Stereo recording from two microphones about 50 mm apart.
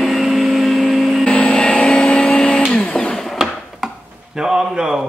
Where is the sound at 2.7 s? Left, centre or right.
Centre.